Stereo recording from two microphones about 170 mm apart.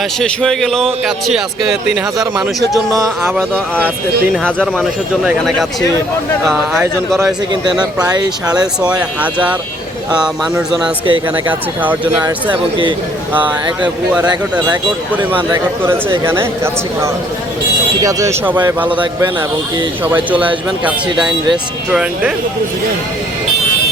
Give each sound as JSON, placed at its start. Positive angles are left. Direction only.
{"t": 0.2, "sound": "speech", "side_deg": 5}
{"t": 2.9, "sound": "speech", "side_deg": -15}
{"t": 4.4, "sound": "speech", "side_deg": 5}
{"t": 7.5, "sound": "speech", "side_deg": -25}
{"t": 9.2, "sound": "speech", "side_deg": -10}
{"t": 11.0, "sound": "speech", "side_deg": -30}
{"t": 15.1, "sound": "speech", "side_deg": -10}